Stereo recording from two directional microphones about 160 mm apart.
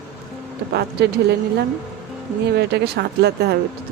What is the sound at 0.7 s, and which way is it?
Speech, 90° right.